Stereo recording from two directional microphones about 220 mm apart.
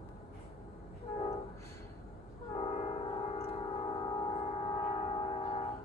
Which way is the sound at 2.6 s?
30° left (ahead or behind).